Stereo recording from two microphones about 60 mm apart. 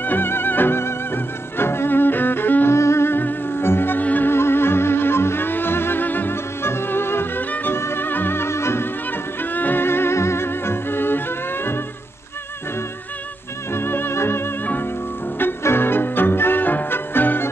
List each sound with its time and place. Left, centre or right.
0.0 s music: left
2.7 s music: left
4.3 s music: left
9.4 s music: left
13.7 s music: left